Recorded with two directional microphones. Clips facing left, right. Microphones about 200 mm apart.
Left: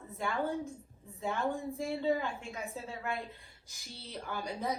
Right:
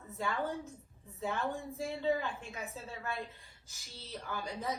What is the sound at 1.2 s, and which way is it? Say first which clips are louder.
A woman's voice: left 2 dB; 15° left (ahead or behind).